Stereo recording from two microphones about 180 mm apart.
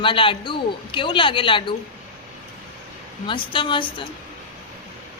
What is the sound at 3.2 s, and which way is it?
Speech, 30° left (ahead or behind).